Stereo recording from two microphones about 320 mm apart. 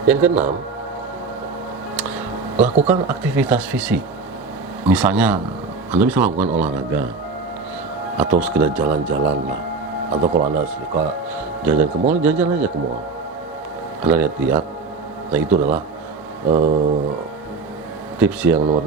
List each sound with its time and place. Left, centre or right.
0.1 s speech: centre
2.0 s a sound: centre
2.8 s speech: centre
8.2 s speech: centre
10.3 s speech: right
11.3 s speech: centre
14.0 s speech: centre
16.5 s speech: right
18.2 s speech: centre